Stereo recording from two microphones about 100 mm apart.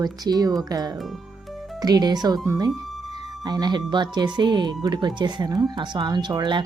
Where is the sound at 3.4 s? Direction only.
45° right (ahead or behind).